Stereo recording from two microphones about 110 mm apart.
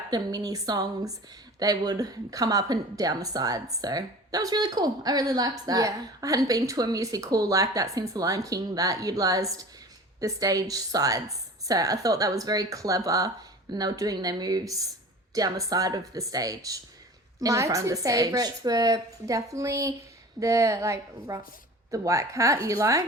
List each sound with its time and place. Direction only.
0.1 s speech: 35° right (ahead or behind)